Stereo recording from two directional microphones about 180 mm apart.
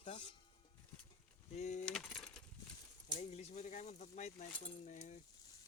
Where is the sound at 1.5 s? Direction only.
40° left (ahead or behind).